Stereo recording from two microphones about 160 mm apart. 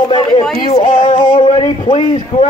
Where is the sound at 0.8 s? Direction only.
55° left (ahead or behind).